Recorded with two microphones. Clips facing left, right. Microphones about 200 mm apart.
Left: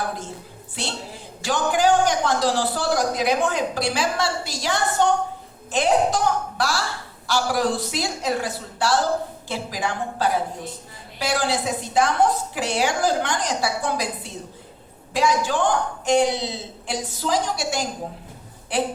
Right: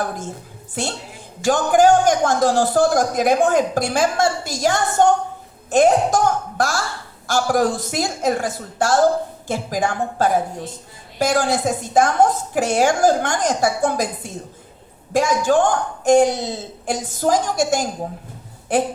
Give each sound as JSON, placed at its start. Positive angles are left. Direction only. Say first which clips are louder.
{"t": 0.8, "sound": "a man's voice", "louder": "right 4 dB", "side_deg": -45}